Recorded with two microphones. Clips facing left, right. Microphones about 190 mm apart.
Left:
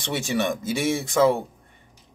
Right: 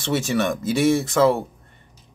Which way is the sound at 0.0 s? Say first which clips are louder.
Right 3 dB; 15° left (ahead or behind).